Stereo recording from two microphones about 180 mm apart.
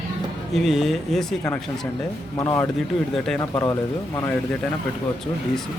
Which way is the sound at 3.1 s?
Centre (ahead or behind).